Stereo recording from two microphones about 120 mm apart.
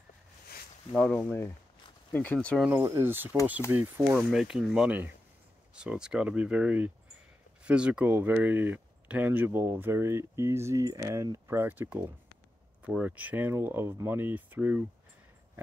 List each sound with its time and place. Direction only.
0.9 s speech: 5° left (ahead or behind)
1.2 s speech: 20° left (ahead or behind)
2.3 s speech: 5° left (ahead or behind)
2.8 s speech: 25° right (ahead or behind)
4.3 s speech: 5° right (ahead or behind)